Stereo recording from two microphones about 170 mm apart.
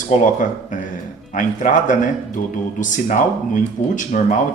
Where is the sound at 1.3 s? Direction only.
50° left (ahead or behind).